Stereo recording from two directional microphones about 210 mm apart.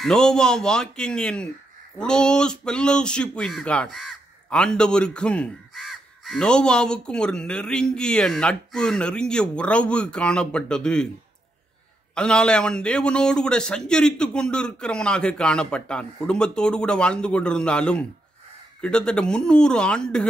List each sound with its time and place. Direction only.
0.0 s speech: centre (ahead or behind)
12.2 s speech: 5° left (ahead or behind)